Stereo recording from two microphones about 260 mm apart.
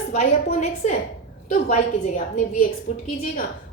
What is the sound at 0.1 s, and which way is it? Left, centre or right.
Speech, left.